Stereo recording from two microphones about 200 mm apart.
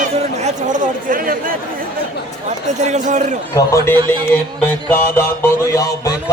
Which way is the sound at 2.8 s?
35° right (ahead or behind).